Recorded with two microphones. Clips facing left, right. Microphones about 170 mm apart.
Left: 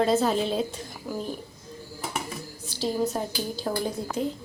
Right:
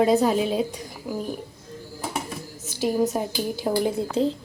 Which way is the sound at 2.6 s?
15° right (ahead or behind).